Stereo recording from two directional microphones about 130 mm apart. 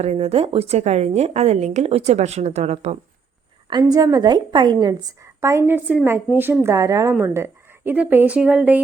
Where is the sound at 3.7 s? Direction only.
30° right (ahead or behind).